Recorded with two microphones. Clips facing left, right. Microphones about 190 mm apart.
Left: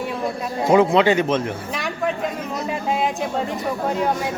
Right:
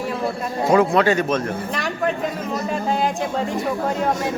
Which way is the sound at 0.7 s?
15° left (ahead or behind).